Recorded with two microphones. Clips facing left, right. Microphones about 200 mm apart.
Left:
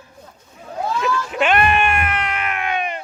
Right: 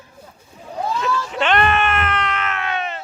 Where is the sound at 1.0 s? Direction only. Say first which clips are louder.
Left 2 dB; 10° left (ahead or behind).